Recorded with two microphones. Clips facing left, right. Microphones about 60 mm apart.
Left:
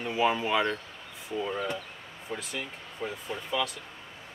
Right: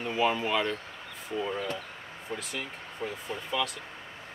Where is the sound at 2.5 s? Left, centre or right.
Centre.